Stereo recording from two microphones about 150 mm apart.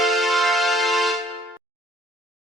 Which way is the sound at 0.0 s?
Centre (ahead or behind).